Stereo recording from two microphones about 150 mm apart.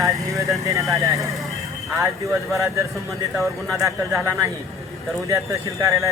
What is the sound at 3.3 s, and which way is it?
Speech, centre (ahead or behind).